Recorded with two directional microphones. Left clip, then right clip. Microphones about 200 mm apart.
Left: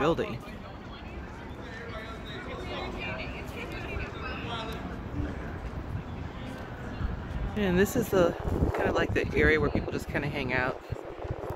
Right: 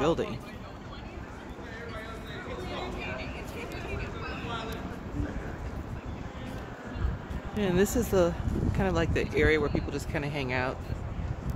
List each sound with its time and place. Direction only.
0.0 s speech: 5° right (ahead or behind)
2.7 s vehicle: 50° right (ahead or behind)
7.5 s speech: 5° right (ahead or behind)